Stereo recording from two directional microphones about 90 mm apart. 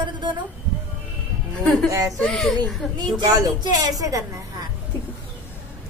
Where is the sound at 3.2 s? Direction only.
45° right (ahead or behind).